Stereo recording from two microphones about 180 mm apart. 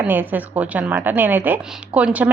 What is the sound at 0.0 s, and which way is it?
A woman's voice, 10° right (ahead or behind).